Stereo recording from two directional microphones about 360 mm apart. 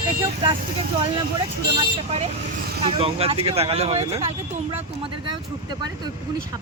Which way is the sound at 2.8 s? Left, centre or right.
Centre.